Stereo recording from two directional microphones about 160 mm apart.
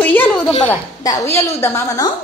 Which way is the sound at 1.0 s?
20° left (ahead or behind).